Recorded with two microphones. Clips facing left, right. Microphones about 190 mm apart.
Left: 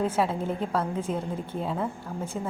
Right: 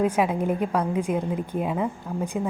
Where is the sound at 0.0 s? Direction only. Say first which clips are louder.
Right 4 dB; 15° right (ahead or behind).